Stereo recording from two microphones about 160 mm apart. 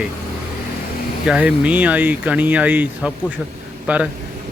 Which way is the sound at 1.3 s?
5° right (ahead or behind).